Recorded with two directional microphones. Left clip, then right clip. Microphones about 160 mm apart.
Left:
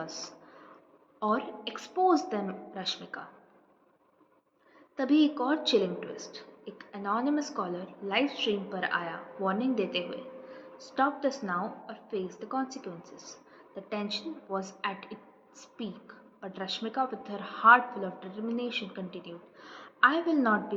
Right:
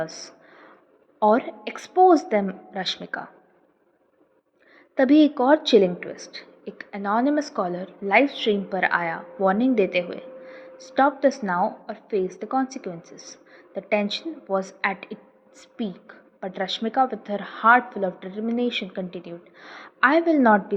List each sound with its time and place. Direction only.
0.0 s a sound: 45° right (ahead or behind)
1.2 s a woman's voice: 45° right (ahead or behind)
4.9 s a woman's voice: 50° right (ahead or behind)